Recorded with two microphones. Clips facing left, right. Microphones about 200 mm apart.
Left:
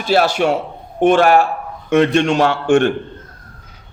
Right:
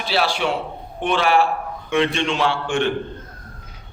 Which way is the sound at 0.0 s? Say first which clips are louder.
Left 7 dB; 45° left (ahead or behind).